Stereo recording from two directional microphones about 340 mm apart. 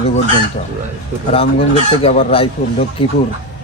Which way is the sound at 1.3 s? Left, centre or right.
Centre.